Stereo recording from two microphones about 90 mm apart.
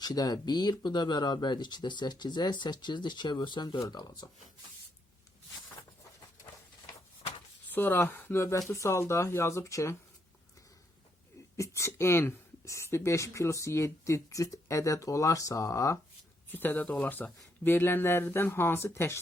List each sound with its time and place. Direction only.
0.0 s speech: 45° left (ahead or behind)
3.8 s speech: 45° left (ahead or behind)
7.7 s speech: 20° left (ahead or behind)
11.5 s speech: 30° left (ahead or behind)
16.5 s speech: 20° left (ahead or behind)